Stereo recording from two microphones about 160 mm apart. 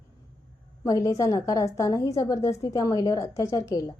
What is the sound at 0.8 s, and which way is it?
A woman's voice, 20° left (ahead or behind).